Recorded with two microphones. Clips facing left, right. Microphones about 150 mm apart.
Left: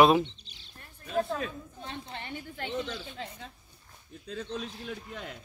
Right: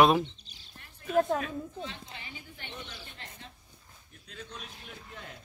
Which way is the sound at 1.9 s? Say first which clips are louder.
Left 6 dB; 60° left (ahead or behind).